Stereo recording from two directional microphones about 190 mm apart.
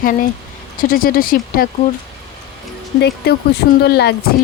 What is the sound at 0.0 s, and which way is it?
Speech, 45° left (ahead or behind).